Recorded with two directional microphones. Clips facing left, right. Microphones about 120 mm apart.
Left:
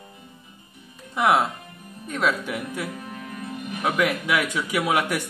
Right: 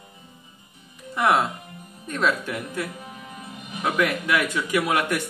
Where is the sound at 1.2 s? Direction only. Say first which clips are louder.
Left 1 dB; 10° left (ahead or behind).